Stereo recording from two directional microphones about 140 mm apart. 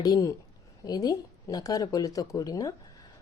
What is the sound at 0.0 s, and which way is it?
A woman's voice, 25° left (ahead or behind).